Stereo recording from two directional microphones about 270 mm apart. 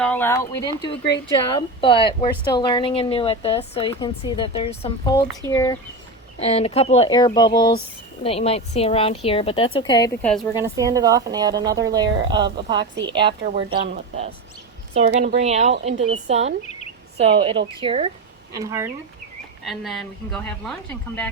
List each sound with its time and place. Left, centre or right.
0.0 s a woman's voice: centre
10.5 s a woman's voice: centre
13.4 s a woman's voice: right; by 18.9 s centre
19.6 s a woman's voice: centre